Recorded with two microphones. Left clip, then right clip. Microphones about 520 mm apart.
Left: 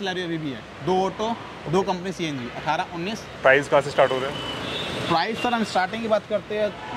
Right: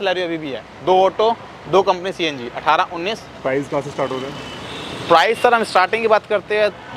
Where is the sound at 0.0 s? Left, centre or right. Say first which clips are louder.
Right 8 dB; right.